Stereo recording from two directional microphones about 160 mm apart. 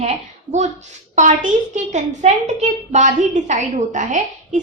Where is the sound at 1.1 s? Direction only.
50° right (ahead or behind).